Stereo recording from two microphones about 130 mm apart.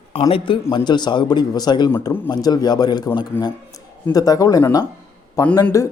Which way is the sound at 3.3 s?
15° left (ahead or behind).